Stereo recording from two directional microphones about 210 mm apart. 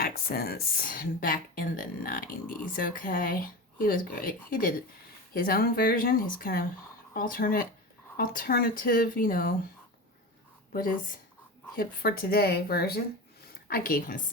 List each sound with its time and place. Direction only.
0.0 s speech: 45° left (ahead or behind)
10.7 s speech: 40° left (ahead or behind)